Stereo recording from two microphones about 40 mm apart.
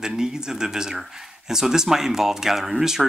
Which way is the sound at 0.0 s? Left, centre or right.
Centre.